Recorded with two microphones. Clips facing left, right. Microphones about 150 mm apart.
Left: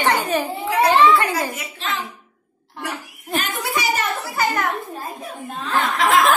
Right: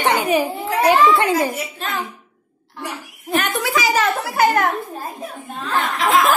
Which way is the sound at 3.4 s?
90° right.